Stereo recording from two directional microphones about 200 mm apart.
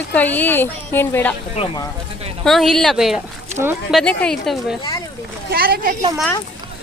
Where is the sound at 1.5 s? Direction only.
30° left (ahead or behind).